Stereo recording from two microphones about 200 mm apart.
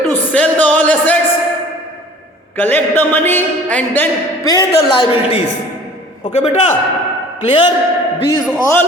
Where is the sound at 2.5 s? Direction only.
10° left (ahead or behind).